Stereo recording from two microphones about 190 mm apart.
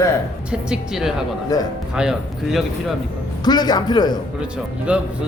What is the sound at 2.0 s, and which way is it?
Speech, centre (ahead or behind).